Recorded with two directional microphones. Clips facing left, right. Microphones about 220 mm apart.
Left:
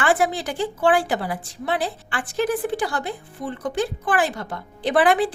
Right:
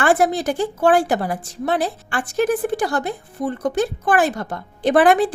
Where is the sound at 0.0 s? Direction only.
45° right (ahead or behind).